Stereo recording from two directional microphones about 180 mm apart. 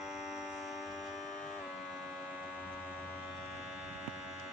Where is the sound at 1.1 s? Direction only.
45° left (ahead or behind).